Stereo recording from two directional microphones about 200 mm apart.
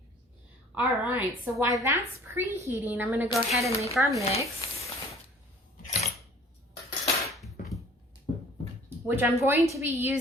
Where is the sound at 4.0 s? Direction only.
15° right (ahead or behind).